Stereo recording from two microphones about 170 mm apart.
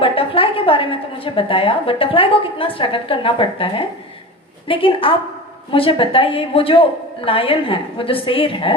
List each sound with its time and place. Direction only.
0.0 s a woman's voice: 30° left (ahead or behind)